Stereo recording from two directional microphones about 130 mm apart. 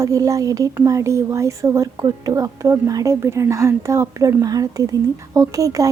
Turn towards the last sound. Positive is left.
turn(degrees=-25)  # may be behind; listen again after turning